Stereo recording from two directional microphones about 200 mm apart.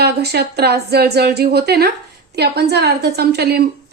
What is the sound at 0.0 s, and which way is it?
A woman's voice, 55° right (ahead or behind).